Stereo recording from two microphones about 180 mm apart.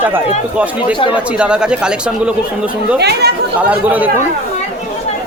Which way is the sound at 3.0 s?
65° right (ahead or behind).